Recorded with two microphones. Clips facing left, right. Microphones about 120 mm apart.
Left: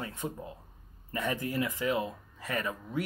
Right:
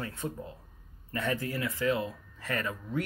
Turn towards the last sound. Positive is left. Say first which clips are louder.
# right 1 dB
turn(degrees=15)  # may be behind; listen again after turning